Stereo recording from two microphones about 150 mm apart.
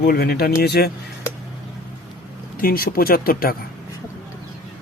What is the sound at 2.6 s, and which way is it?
Speech, 80° left.